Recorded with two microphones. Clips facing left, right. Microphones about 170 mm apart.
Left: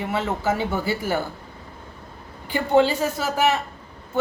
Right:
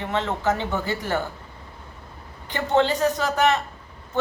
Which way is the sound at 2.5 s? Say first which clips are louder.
Left 2 dB; 10° left (ahead or behind).